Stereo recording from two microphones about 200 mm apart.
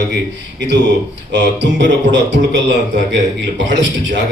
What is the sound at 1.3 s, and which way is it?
A man's voice, 60° right (ahead or behind).